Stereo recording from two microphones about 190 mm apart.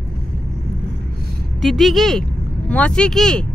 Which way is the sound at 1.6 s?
Centre (ahead or behind).